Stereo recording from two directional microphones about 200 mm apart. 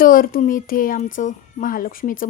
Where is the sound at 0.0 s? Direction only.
45° left (ahead or behind).